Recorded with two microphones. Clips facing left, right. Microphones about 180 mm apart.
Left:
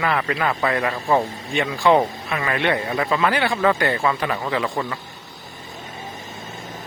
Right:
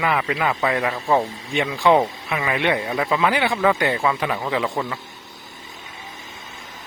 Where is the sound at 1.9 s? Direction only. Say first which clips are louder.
Even; 5° right (ahead or behind).